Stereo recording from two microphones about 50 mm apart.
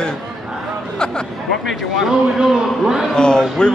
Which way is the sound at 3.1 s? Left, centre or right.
Centre.